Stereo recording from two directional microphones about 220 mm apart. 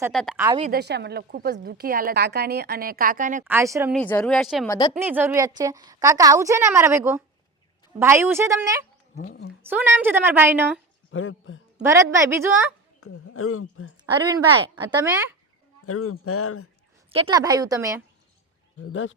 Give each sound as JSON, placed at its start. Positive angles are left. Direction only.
{"t": 0.1, "sound": "speech", "side_deg": 0}
{"t": 0.3, "sound": "a woman's voice", "side_deg": -15}
{"t": 0.6, "sound": "a woman's voice", "side_deg": -45}
{"t": 3.4, "sound": "a woman's voice", "side_deg": -10}
{"t": 3.9, "sound": "a woman's voice", "side_deg": 5}
{"t": 9.1, "sound": "speech", "side_deg": 45}
{"t": 9.6, "sound": "a woman's voice", "side_deg": -10}
{"t": 11.1, "sound": "speech", "side_deg": 65}
{"t": 11.8, "sound": "a woman's voice", "side_deg": -15}
{"t": 13.0, "sound": "speech", "side_deg": 75}
{"t": 14.1, "sound": "a woman's voice", "side_deg": -20}
{"t": 15.9, "sound": "speech", "side_deg": 90}
{"t": 17.1, "sound": "a woman's voice", "side_deg": -25}
{"t": 18.8, "sound": "speech", "side_deg": 60}